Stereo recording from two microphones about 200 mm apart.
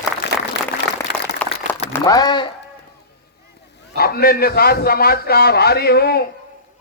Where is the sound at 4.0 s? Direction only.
50° left (ahead or behind).